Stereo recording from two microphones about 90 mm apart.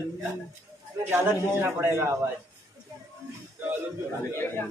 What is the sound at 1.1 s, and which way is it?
A man's voice, 25° right (ahead or behind).